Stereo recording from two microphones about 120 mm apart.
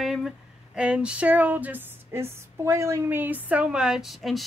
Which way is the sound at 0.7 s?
10° right (ahead or behind).